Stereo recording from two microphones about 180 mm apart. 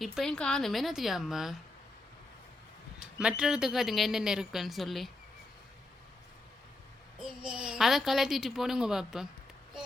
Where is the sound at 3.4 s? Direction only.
5° right (ahead or behind).